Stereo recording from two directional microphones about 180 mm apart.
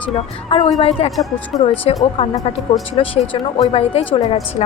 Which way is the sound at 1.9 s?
30° left (ahead or behind).